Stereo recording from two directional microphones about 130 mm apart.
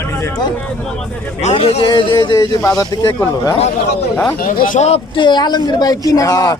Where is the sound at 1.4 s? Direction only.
55° left (ahead or behind).